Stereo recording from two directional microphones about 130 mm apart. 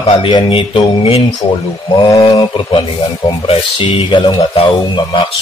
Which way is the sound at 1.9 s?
35° left (ahead or behind).